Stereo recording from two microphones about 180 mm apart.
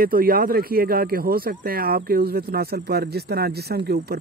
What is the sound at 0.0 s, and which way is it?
Speech, 55° right (ahead or behind).